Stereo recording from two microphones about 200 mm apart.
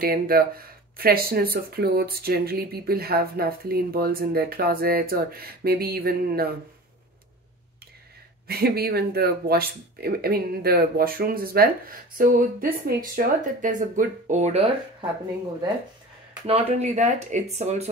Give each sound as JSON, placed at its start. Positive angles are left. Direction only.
{"t": 0.0, "sound": "speech", "side_deg": -45}
{"t": 8.5, "sound": "speech", "side_deg": -50}
{"t": 16.4, "sound": "speech", "side_deg": -30}